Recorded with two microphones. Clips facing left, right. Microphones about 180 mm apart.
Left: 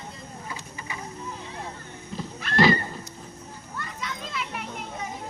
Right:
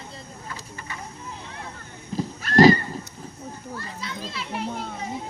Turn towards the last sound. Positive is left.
turn(degrees=-30)  # may be behind; listen again after turning